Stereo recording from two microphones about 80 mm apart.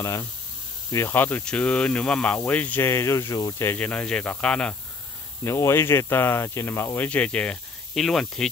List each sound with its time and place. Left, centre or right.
0.0 s speech: left
1.4 s speech: centre
2.8 s speech: left
3.7 s speech: centre
5.4 s speech: left
7.1 s speech: centre
7.9 s speech: centre